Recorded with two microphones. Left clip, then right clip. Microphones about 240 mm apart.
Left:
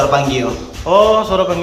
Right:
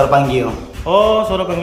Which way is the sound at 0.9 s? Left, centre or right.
Centre.